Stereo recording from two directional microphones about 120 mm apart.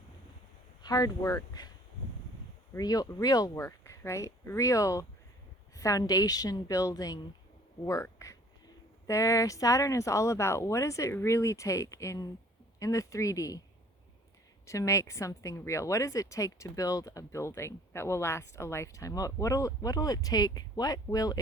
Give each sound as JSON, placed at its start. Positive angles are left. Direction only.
{"t": 0.8, "sound": "a woman's voice", "side_deg": 30}
{"t": 2.7, "sound": "a woman's voice", "side_deg": 30}
{"t": 14.7, "sound": "a woman's voice", "side_deg": 25}